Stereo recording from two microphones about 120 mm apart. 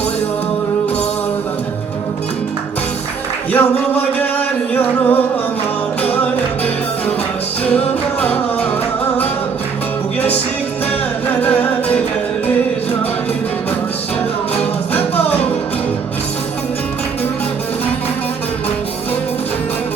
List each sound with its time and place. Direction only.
3.5 s music: 15° left (ahead or behind)
7.6 s music: 10° left (ahead or behind)
11.3 s music: 10° left (ahead or behind)
14.9 s music: 15° left (ahead or behind)